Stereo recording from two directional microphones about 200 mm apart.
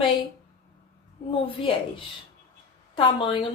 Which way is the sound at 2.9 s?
25° left (ahead or behind).